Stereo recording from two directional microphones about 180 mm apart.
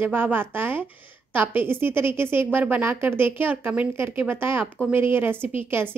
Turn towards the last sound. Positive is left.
turn(degrees=-10)  # may be behind; listen again after turning